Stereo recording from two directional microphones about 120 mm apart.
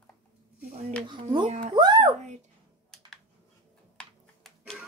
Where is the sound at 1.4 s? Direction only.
80° right.